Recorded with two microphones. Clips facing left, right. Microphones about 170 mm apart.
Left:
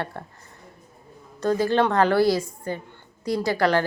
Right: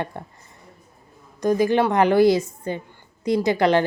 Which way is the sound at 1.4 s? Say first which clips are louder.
Right 2 dB; 15° right (ahead or behind).